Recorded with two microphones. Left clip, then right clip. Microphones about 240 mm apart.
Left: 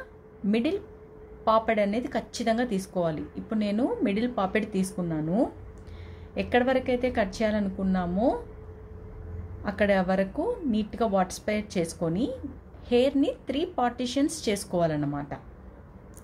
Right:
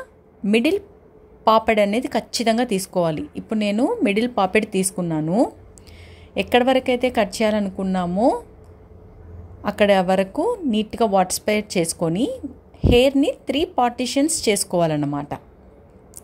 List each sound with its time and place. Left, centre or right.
0.5 s a woman's voice: right
9.6 s a woman's voice: right